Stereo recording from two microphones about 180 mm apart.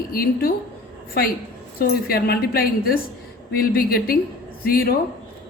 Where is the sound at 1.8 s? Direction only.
55° left (ahead or behind).